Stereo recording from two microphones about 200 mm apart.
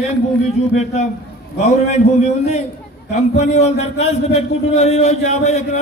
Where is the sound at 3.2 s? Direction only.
35° left (ahead or behind).